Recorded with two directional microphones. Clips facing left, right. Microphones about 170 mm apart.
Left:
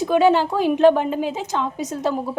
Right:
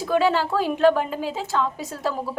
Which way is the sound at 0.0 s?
20° left (ahead or behind).